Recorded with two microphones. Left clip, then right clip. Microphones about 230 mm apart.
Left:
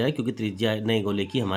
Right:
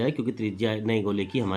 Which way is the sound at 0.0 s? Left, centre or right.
Left.